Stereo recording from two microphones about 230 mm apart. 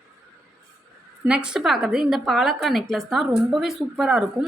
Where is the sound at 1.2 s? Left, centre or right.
Centre.